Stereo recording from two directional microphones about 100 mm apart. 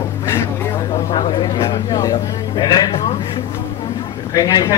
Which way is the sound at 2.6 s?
40° left (ahead or behind).